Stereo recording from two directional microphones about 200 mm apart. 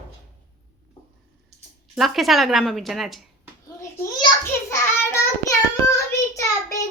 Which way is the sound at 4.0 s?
15° left (ahead or behind).